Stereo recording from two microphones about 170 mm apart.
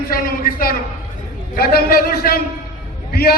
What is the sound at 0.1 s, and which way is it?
A man's voice, 60° left (ahead or behind).